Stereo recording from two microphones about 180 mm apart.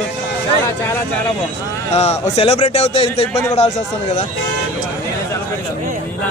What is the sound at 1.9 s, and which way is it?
A man's voice, 35° left (ahead or behind).